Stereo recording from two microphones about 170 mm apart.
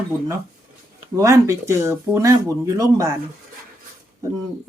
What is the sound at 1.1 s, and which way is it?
Speech, 20° right (ahead or behind).